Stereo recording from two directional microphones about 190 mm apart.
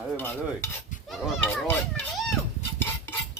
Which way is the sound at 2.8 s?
10° left (ahead or behind).